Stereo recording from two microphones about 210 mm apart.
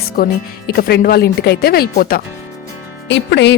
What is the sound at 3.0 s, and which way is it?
Speech, 55° left (ahead or behind).